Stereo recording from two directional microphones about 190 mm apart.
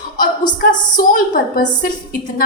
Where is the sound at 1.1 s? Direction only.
45° left (ahead or behind).